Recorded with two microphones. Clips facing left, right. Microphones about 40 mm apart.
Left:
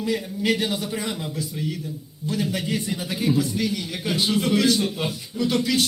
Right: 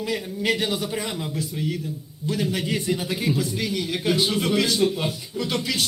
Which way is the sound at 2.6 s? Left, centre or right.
Right.